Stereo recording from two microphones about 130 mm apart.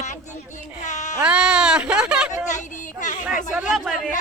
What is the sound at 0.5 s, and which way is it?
Speech, 70° left (ahead or behind).